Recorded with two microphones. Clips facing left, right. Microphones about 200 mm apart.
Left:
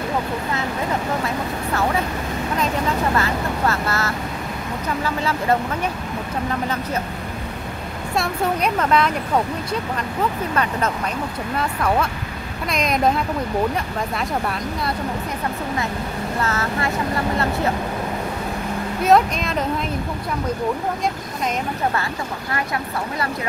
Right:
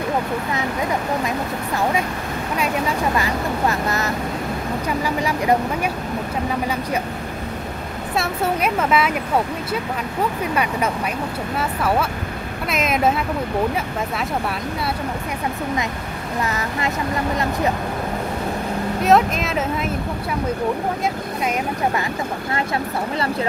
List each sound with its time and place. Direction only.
3.2 s speech: 15° right (ahead or behind)
8.2 s speech: 5° right (ahead or behind)
10.5 s speech: 10° right (ahead or behind)
16.4 s speech: 15° right (ahead or behind)
19.0 s speech: centre (ahead or behind)